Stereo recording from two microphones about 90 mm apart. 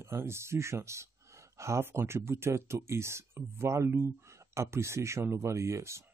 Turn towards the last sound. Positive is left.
turn(degrees=-30)  # may be behind; listen again after turning